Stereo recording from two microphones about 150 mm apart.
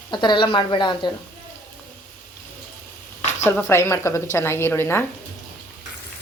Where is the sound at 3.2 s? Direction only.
50° left (ahead or behind).